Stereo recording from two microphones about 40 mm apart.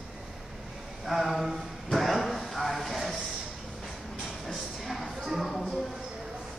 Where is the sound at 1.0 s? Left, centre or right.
Centre.